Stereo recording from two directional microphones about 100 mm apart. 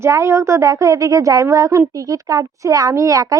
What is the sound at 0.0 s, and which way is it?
A woman's voice, 30° right (ahead or behind).